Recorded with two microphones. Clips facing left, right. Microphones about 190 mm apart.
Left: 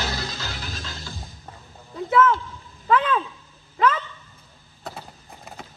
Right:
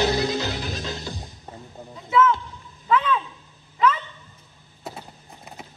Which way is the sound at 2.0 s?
55° left (ahead or behind).